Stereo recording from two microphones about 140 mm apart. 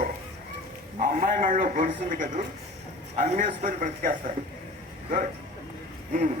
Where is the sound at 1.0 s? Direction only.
70° right (ahead or behind).